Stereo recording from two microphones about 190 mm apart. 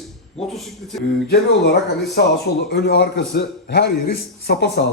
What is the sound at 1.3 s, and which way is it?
A man's voice, 60° left (ahead or behind).